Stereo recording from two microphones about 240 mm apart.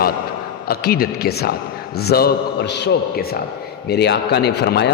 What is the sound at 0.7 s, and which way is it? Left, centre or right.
A man's voice, left.